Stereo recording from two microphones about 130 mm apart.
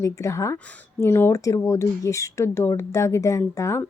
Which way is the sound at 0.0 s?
25° left (ahead or behind).